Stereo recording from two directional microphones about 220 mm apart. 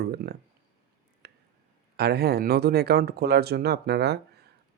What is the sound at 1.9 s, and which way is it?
Speech, 45° right (ahead or behind).